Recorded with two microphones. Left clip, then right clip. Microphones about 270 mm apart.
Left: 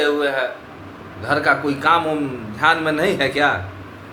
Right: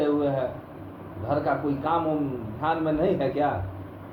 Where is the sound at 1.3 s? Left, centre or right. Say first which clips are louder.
Left 8 dB; left.